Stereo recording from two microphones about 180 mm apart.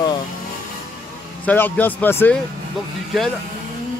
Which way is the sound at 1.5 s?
10° left (ahead or behind).